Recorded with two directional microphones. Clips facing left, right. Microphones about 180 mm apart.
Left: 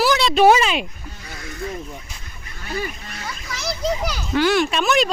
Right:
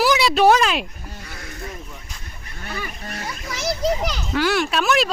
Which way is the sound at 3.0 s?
45° right (ahead or behind).